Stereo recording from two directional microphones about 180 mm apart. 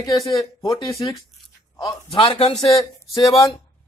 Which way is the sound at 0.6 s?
25° left (ahead or behind).